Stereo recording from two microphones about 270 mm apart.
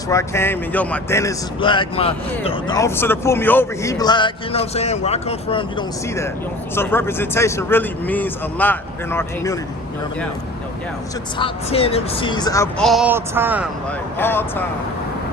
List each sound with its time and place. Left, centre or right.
0.1 s speech: centre
11.3 s speech: left
12.8 s a man's voice: centre
14.2 s speech: centre